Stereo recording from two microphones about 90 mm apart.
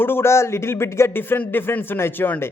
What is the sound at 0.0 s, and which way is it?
A man's voice, 25° left (ahead or behind).